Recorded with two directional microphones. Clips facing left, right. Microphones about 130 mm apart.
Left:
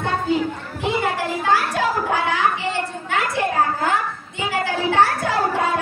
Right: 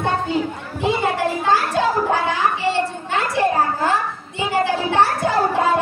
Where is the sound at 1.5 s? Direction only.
25° right (ahead or behind).